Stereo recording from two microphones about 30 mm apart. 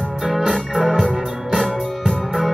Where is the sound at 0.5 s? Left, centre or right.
Centre.